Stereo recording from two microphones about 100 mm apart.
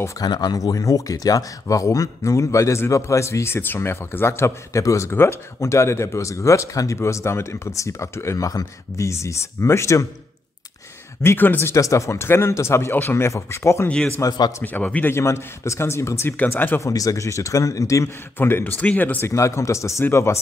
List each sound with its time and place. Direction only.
0.2 s speech: 40° left (ahead or behind)
11.2 s speech: 20° left (ahead or behind)
13.8 s speech: 10° left (ahead or behind)
14.2 s a man's voice: 45° left (ahead or behind)
14.6 s speech: 15° left (ahead or behind)
15.1 s speech: 25° left (ahead or behind)
16.8 s a man's voice: 35° left (ahead or behind); by 19.3 s 20° left (ahead or behind)
19.3 s speech: 30° left (ahead or behind)